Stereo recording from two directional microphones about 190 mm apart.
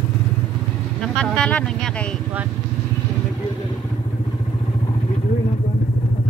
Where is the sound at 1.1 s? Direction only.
5° left (ahead or behind).